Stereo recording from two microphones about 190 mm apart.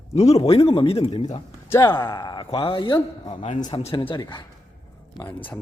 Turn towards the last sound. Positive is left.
turn(degrees=15)  # may be behind; listen again after turning